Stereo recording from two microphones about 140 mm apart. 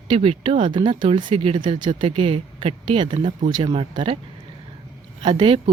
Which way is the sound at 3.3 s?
55° right (ahead or behind).